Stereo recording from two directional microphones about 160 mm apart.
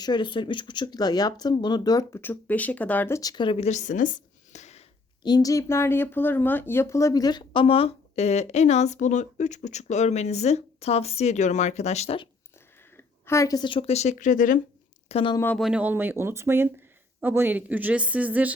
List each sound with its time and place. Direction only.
0.0 s speech: 30° left (ahead or behind); by 4.8 s 45° left (ahead or behind)
5.2 s speech: 25° left (ahead or behind)
13.0 s speech: 15° left (ahead or behind); by 14.6 s 55° left (ahead or behind)
15.1 s speech: 30° left (ahead or behind)
15.5 s speech: 5° right (ahead or behind)